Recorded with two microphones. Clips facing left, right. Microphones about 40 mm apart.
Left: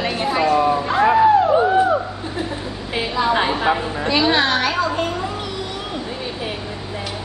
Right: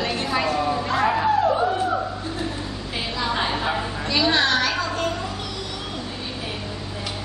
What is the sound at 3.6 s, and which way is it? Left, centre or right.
A woman's voice, left.